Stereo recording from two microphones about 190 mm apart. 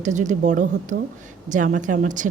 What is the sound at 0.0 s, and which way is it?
A woman's voice, 40° right (ahead or behind).